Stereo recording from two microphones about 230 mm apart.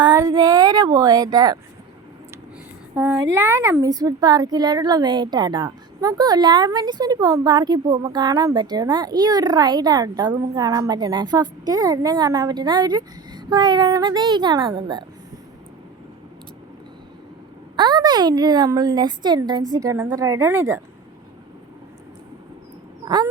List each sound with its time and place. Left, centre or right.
0.0 s a woman's voice: centre
2.9 s a woman's voice: centre
17.7 s a woman's voice: centre
23.0 s a woman's voice: centre